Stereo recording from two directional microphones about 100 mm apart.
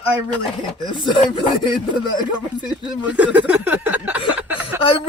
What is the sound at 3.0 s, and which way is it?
Speech, 10° right (ahead or behind).